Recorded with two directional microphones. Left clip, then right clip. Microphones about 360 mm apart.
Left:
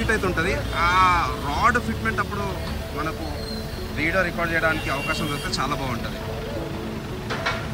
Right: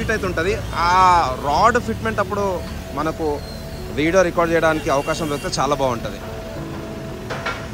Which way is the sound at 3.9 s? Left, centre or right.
Centre.